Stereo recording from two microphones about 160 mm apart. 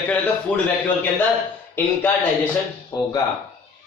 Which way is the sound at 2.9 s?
25° left (ahead or behind).